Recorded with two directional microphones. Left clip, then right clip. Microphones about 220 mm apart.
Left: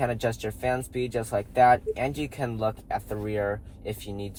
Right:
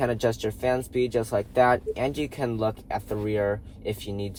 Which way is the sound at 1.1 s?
30° right (ahead or behind).